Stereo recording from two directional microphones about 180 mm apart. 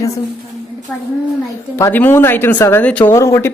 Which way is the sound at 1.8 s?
10° left (ahead or behind).